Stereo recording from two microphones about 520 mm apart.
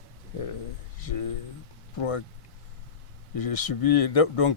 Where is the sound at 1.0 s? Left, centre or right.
Left.